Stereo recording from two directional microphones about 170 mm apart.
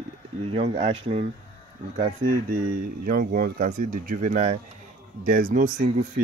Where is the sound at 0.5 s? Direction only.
40° right (ahead or behind).